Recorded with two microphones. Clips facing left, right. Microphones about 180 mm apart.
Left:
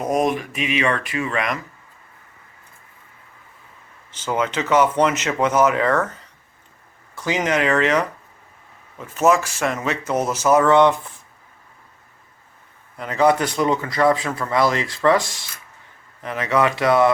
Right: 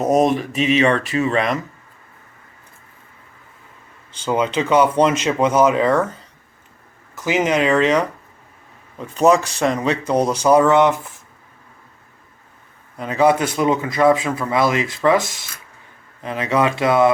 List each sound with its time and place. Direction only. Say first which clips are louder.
0.0 s speech: right 4 dB; 30° right (ahead or behind)
4.3 s speech: right 3 dB; 15° right (ahead or behind)
7.2 s speech: right 3 dB; 15° right (ahead or behind)
13.0 s speech: right 2 dB; 15° right (ahead or behind)